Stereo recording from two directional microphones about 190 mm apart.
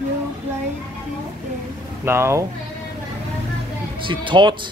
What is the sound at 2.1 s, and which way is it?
Speech, 15° right (ahead or behind).